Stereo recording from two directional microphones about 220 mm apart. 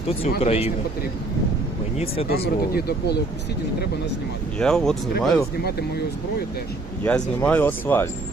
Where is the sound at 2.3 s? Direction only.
45° left (ahead or behind).